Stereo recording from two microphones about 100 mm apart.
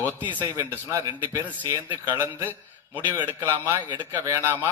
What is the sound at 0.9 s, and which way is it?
Speech, 35° right (ahead or behind).